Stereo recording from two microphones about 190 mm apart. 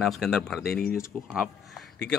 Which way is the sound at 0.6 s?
50° left (ahead or behind).